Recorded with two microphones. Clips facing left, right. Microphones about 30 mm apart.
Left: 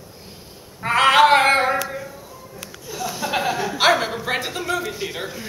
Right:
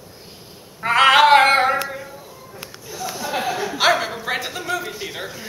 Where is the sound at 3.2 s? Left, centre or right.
Left.